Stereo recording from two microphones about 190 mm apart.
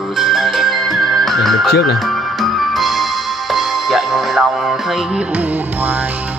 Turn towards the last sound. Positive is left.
turn(degrees=-5)  # may be behind; listen again after turning